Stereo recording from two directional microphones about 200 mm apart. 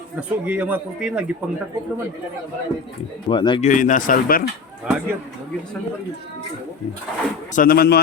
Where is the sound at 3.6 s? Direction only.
40° left (ahead or behind).